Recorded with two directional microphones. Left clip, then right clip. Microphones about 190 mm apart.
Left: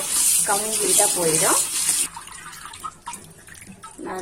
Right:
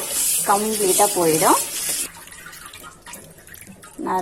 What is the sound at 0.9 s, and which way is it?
Speech, 15° right (ahead or behind).